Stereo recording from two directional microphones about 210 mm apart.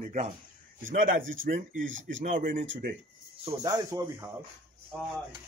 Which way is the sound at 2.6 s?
60° right (ahead or behind).